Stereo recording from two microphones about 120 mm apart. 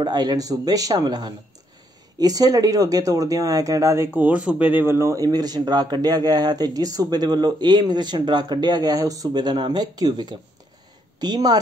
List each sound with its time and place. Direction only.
0.0 s speech: 35° right (ahead or behind)